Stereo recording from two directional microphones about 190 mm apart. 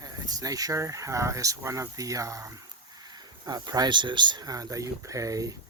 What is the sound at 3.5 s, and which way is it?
Speech, 20° right (ahead or behind).